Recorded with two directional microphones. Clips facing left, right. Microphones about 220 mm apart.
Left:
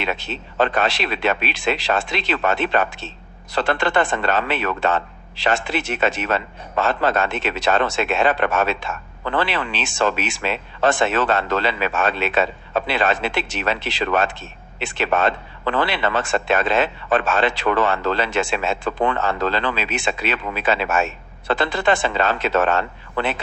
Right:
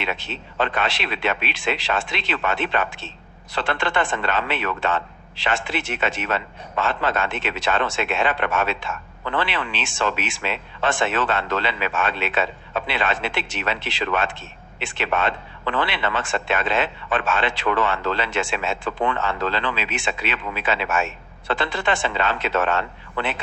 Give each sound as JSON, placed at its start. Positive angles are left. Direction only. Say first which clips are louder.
{"t": 0.0, "sound": "a man's voice", "louder": "left 3 dB", "side_deg": 40}